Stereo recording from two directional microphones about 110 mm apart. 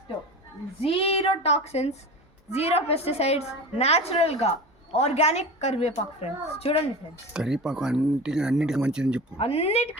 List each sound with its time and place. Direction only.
0.8 s a woman's voice: 60° left (ahead or behind)
7.3 s speech: 5° right (ahead or behind)
9.4 s speech: 65° left (ahead or behind)